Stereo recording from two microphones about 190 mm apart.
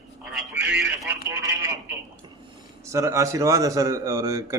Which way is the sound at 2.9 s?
15° right (ahead or behind).